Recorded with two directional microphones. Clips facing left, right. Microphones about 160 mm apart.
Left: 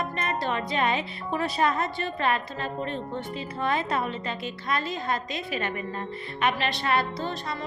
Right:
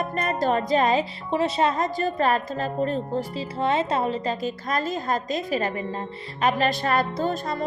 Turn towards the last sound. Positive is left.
turn(degrees=-45)  # may be behind; listen again after turning